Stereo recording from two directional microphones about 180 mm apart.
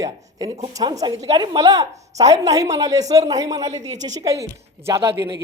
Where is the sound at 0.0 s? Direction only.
20° right (ahead or behind).